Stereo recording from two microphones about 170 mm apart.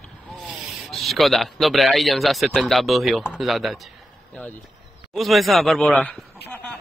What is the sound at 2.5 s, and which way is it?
Speech, centre (ahead or behind).